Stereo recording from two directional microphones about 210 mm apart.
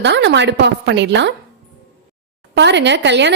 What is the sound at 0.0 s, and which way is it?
A woman's voice, 55° right (ahead or behind).